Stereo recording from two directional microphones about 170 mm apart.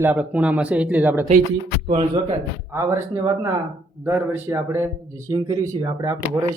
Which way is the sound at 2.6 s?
15° right (ahead or behind).